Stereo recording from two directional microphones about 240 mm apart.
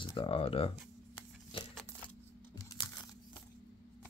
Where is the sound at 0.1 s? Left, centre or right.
Left.